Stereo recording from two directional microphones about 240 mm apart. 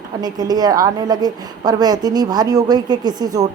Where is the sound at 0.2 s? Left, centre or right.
Centre.